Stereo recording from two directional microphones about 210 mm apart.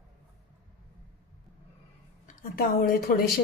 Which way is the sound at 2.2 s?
45° left (ahead or behind).